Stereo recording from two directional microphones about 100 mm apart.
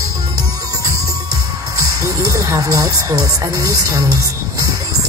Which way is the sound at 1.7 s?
35° right (ahead or behind).